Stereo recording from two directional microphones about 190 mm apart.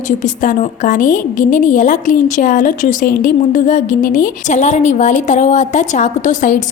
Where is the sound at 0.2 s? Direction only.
40° left (ahead or behind).